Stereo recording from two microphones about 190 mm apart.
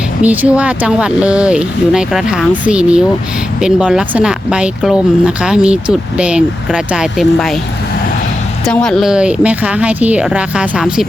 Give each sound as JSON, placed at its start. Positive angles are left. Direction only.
{"t": 0.2, "sound": "speech", "side_deg": -5}
{"t": 8.6, "sound": "speech", "side_deg": 5}